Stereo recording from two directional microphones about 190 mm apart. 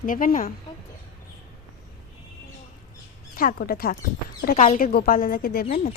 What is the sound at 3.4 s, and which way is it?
Speech, 50° left (ahead or behind).